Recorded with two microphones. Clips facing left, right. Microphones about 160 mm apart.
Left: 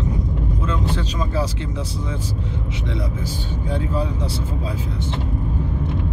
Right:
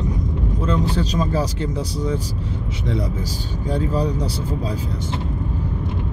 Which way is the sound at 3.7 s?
40° right (ahead or behind).